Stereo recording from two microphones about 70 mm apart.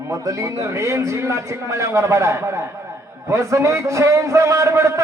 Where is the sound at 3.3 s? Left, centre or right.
Right.